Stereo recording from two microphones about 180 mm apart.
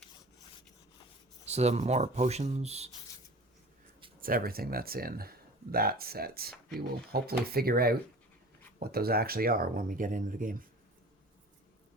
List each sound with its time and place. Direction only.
1.5 s speech: 35° right (ahead or behind)
4.2 s speech: 55° right (ahead or behind)